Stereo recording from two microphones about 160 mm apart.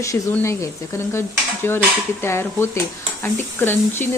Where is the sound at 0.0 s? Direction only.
15° left (ahead or behind).